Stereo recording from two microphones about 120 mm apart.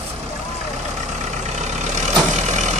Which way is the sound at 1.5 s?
75° right (ahead or behind).